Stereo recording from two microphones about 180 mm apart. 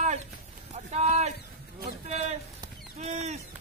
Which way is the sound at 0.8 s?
40° right (ahead or behind).